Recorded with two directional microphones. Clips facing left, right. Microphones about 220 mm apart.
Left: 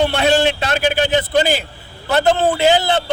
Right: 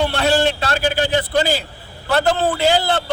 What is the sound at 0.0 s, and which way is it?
A man's voice, 20° left (ahead or behind).